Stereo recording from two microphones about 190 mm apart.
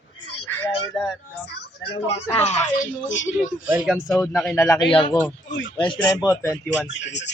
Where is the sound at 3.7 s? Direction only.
5° right (ahead or behind).